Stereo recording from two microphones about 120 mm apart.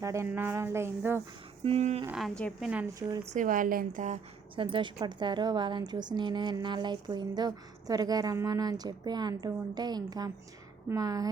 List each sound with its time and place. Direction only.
0.0 s speech: 25° right (ahead or behind)
1.6 s speech: 60° right (ahead or behind)
2.1 s a woman's voice: centre (ahead or behind)
3.3 s a woman's voice: 90° right
4.5 s a woman's voice: 45° right (ahead or behind)